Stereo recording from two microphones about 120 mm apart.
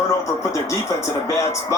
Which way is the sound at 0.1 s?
25° left (ahead or behind).